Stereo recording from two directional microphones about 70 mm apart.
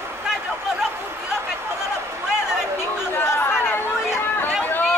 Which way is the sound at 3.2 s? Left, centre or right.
Left.